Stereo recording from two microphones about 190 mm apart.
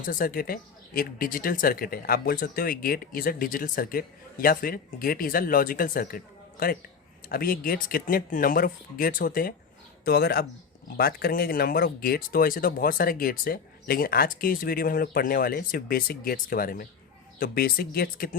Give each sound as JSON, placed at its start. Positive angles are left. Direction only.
{"t": 0.0, "sound": "speech", "side_deg": 45}